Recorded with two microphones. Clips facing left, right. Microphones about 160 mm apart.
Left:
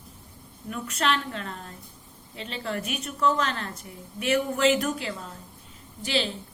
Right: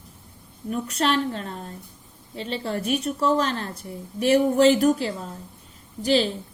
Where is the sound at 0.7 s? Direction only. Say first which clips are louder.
Right 4 dB; 35° right (ahead or behind).